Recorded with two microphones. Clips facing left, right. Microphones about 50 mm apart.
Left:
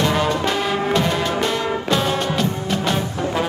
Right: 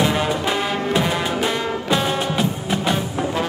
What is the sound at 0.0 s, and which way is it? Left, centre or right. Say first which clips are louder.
Music: left 1 dB; centre.